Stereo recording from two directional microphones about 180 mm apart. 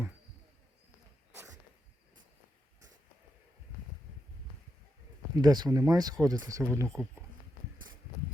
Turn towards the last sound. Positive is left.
turn(degrees=-15)  # may be behind; listen again after turning